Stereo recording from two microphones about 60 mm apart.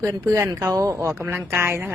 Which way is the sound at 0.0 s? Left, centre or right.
Right.